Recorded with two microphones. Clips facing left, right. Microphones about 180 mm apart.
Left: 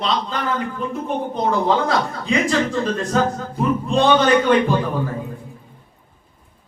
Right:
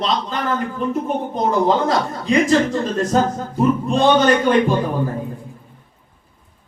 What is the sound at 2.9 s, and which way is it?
A man's voice, 40° right (ahead or behind).